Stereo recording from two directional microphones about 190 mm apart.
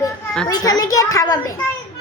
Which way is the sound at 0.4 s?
20° left (ahead or behind).